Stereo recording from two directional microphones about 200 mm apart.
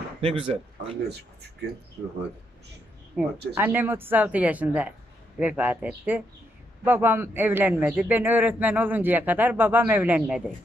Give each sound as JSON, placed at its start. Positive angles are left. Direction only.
{"t": 0.2, "sound": "speech", "side_deg": -30}
{"t": 1.0, "sound": "speech", "side_deg": -55}
{"t": 3.2, "sound": "a man's voice", "side_deg": -5}